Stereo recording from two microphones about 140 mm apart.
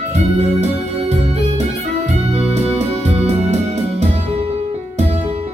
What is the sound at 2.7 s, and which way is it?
Music, 45° right (ahead or behind).